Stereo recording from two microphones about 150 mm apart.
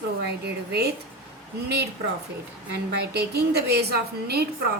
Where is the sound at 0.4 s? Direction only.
90° right.